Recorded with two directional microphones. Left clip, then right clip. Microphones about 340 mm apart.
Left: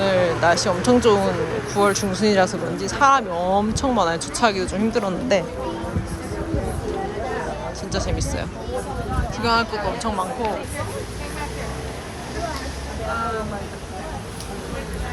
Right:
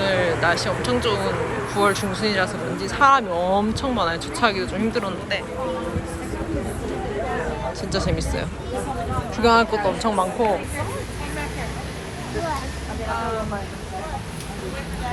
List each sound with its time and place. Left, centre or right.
0.0 s speech: centre
7.9 s speech: centre
9.4 s speech: centre